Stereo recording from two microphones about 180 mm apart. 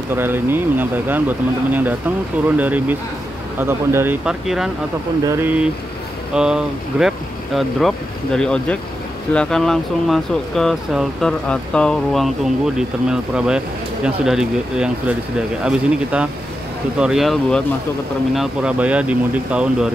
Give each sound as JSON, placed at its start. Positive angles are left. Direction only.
{"t": 0.1, "sound": "speech", "side_deg": -10}
{"t": 5.2, "sound": "speech", "side_deg": -15}
{"t": 6.3, "sound": "speech", "side_deg": -5}